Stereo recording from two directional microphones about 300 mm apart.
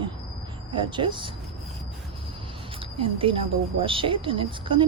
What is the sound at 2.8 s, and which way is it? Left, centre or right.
Speech, centre.